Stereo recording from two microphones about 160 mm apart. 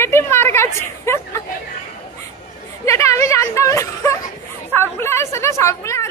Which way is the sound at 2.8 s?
20° left (ahead or behind).